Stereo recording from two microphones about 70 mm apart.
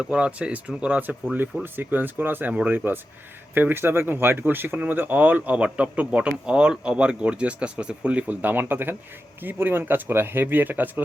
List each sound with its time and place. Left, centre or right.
0.0 s speech: centre